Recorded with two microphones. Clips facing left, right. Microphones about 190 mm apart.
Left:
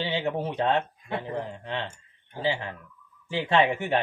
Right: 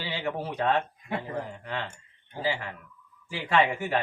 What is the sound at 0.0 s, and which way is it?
Speech, 25° left (ahead or behind).